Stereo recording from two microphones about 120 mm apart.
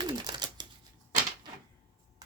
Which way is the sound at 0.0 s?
35° right (ahead or behind).